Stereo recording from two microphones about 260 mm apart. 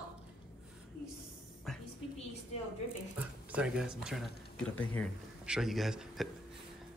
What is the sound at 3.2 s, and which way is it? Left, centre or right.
A man's voice, centre.